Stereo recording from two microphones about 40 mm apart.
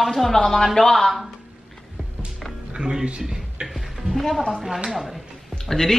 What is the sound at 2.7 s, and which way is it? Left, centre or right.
Music, centre.